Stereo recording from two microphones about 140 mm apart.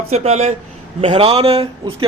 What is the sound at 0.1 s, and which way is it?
A man's voice, 50° right (ahead or behind).